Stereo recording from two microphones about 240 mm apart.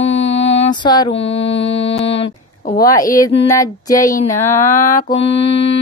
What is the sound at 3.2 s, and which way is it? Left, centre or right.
Speech, centre.